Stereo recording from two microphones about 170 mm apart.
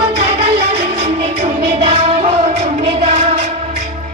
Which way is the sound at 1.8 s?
30° right (ahead or behind).